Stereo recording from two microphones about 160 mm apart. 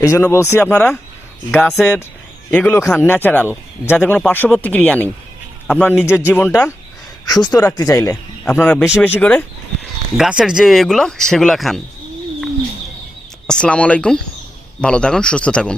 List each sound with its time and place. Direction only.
0.0 s speech: 20° left (ahead or behind)
10.2 s speech: 5° right (ahead or behind)
13.5 s speech: 5° left (ahead or behind)